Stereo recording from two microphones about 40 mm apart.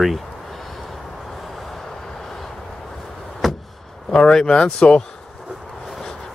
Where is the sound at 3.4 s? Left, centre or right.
Centre.